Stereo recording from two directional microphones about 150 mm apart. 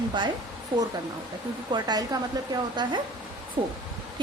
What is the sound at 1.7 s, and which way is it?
A woman's voice, 25° right (ahead or behind).